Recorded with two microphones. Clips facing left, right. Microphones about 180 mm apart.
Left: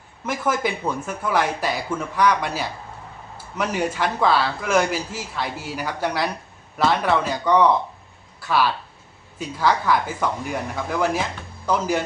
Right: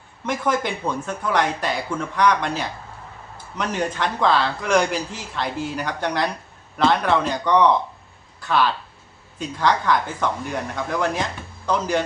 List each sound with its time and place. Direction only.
0.3 s speech: 5° left (ahead or behind)